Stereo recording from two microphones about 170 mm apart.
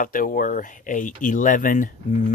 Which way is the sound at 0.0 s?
55° left (ahead or behind).